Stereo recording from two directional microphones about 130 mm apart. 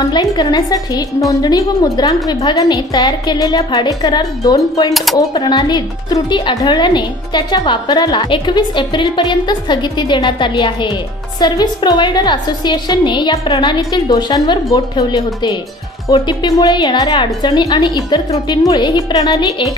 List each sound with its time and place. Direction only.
0.0 s a woman's voice: 35° left (ahead or behind)